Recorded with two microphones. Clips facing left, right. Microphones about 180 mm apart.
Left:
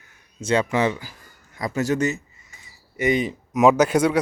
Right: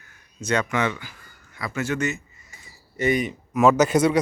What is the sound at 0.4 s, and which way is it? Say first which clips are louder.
A man's voice: left 3 dB; 30° left (ahead or behind).